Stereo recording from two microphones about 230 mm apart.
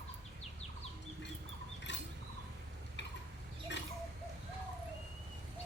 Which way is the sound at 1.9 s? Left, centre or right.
Left.